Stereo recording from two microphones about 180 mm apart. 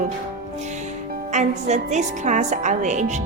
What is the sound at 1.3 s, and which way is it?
A woman's voice, 40° right (ahead or behind).